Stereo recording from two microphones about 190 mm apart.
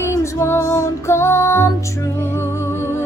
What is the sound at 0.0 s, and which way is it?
Music, 15° left (ahead or behind).